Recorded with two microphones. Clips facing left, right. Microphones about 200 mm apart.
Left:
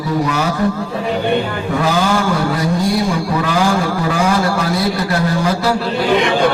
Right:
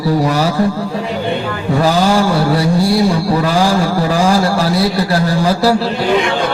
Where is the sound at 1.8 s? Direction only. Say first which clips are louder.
Right 4 dB; 35° right (ahead or behind).